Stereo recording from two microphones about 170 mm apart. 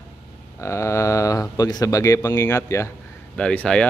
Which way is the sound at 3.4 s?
5° left (ahead or behind).